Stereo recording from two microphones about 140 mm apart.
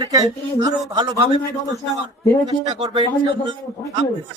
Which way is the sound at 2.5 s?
35° right (ahead or behind).